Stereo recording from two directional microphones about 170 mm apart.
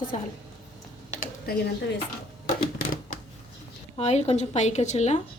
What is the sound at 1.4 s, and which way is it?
Speech, 60° left (ahead or behind).